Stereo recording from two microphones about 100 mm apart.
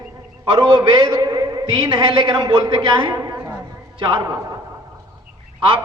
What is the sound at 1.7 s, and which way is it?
A woman's voice, 60° right (ahead or behind).